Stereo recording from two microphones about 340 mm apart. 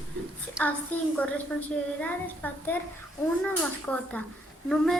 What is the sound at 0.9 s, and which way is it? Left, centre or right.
A child's voice, centre.